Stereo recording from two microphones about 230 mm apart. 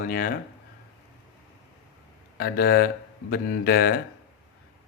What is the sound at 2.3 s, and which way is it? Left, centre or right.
Speech, left.